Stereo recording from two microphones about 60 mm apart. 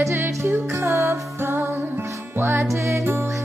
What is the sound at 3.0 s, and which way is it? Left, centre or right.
Music, right.